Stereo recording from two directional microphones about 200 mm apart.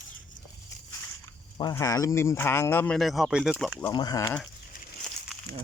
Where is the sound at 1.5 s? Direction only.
20° left (ahead or behind); by 3.8 s centre (ahead or behind).